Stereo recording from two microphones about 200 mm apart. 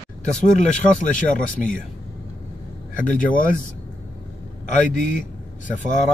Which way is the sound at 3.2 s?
45° left (ahead or behind).